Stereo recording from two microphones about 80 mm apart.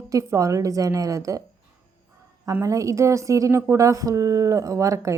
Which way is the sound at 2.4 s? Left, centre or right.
Right.